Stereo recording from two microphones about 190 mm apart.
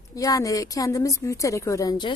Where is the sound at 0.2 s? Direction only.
15° left (ahead or behind).